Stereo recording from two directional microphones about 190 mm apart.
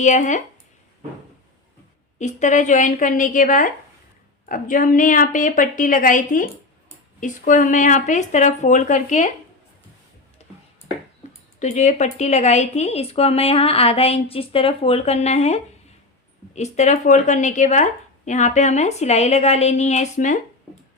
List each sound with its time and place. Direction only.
0.0 s speech: 40° left (ahead or behind)
2.1 s a woman's voice: 40° left (ahead or behind)
11.6 s speech: 40° left (ahead or behind)